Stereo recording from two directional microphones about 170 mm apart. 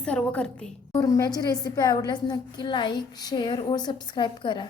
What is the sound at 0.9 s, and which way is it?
A woman's voice, 20° left (ahead or behind).